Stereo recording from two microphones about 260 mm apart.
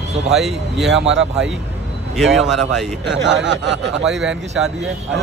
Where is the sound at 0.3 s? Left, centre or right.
Centre.